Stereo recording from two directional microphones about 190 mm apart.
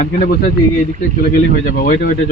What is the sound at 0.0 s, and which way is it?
Speech, 50° left (ahead or behind).